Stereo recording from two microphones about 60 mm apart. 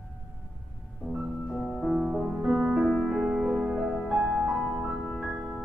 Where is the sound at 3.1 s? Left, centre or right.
Centre.